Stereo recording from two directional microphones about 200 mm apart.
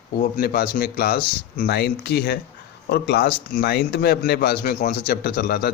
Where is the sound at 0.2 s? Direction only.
45° left (ahead or behind).